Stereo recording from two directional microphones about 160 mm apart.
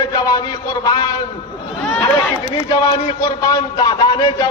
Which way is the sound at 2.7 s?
25° left (ahead or behind).